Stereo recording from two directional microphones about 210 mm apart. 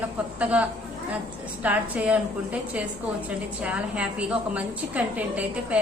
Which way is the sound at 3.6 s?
5° right (ahead or behind).